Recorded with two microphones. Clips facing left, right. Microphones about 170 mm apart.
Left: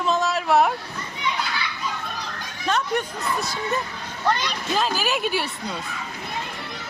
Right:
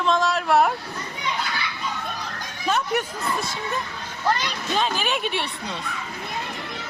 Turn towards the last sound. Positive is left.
turn(degrees=5)  # may be behind; listen again after turning